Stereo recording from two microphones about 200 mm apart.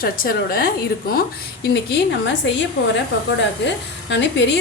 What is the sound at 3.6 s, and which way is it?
Speech, 60° left (ahead or behind).